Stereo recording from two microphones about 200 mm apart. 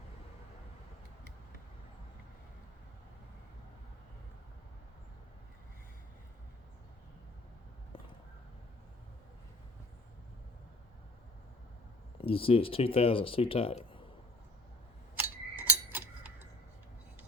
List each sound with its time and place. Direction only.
12.2 s speech: 30° left (ahead or behind)
15.1 s clock: 10° right (ahead or behind)